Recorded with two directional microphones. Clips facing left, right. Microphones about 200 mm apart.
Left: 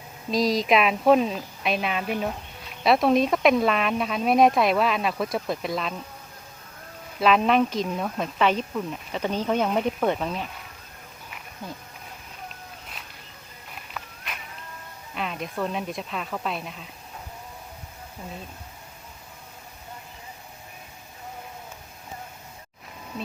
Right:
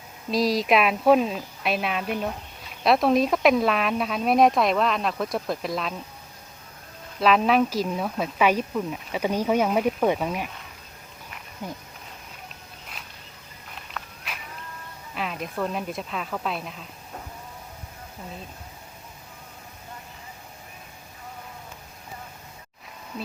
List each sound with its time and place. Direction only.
0.3 s a woman's voice: centre (ahead or behind)
7.2 s speech: centre (ahead or behind)
11.6 s speech: 15° right (ahead or behind)
14.0 s a sound: 5° left (ahead or behind)
15.1 s a woman's voice: centre (ahead or behind)